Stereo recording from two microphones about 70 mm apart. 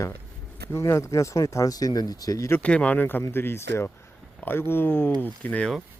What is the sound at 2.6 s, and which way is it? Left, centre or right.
Speech, centre.